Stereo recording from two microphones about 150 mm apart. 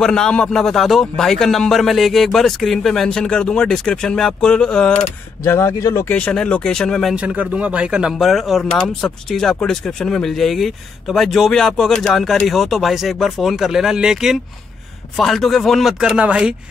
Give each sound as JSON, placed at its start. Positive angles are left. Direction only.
{"t": 0.0, "sound": "speech", "side_deg": 5}
{"t": 5.4, "sound": "speech", "side_deg": 20}
{"t": 6.1, "sound": "speech", "side_deg": 5}
{"t": 7.2, "sound": "speech", "side_deg": -10}